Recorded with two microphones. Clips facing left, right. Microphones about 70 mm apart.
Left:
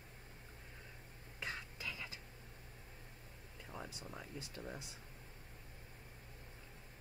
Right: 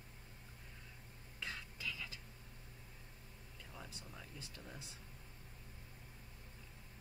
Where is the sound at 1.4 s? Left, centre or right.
Left.